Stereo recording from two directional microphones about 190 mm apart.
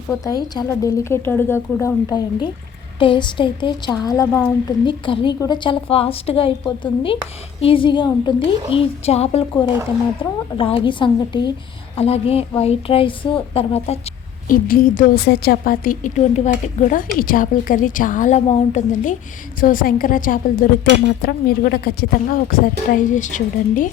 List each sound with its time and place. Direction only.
0.1 s a woman's voice: 20° left (ahead or behind)
14.4 s a woman's voice: 45° left (ahead or behind)